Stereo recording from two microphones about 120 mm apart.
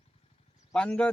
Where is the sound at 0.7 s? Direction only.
5° left (ahead or behind).